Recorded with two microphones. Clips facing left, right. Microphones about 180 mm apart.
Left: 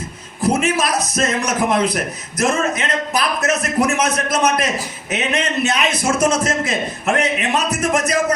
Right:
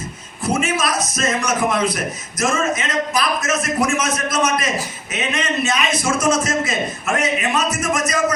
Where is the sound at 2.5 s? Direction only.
60° left (ahead or behind).